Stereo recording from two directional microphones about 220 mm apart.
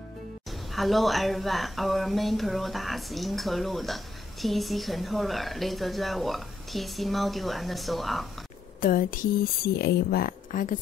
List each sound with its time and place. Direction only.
0.5 s speech: centre (ahead or behind)
8.8 s speech: 40° left (ahead or behind)